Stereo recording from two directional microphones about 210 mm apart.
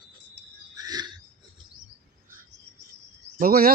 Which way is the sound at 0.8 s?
20° right (ahead or behind).